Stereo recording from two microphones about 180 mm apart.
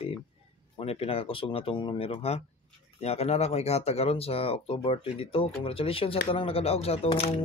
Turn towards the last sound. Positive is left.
turn(degrees=35)  # may be behind; listen again after turning